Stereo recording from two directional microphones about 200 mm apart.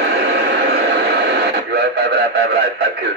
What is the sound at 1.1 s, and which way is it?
Radio, 55° right (ahead or behind).